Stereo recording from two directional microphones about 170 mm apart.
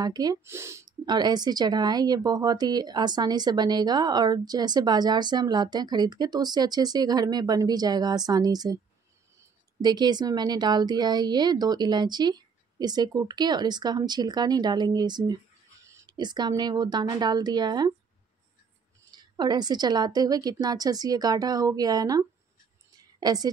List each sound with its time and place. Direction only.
0.0 s speech: 25° right (ahead or behind)
9.8 s speech: 25° right (ahead or behind)
19.1 s a woman's voice: 25° right (ahead or behind)